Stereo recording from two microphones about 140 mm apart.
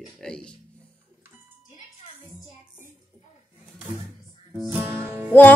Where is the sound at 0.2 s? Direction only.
5° left (ahead or behind).